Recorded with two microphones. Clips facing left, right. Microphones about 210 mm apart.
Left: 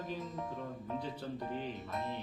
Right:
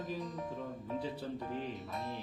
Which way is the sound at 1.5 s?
Centre (ahead or behind).